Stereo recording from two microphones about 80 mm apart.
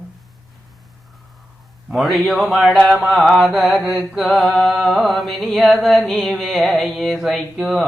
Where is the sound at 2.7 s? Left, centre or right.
Centre.